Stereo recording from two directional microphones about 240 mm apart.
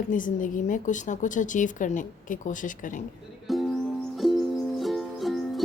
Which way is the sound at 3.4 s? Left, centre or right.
Centre.